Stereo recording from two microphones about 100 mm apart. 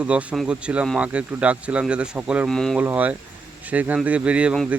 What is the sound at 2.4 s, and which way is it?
Speech, 5° left (ahead or behind).